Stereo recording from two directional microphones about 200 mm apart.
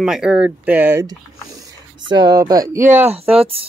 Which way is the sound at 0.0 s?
5° right (ahead or behind).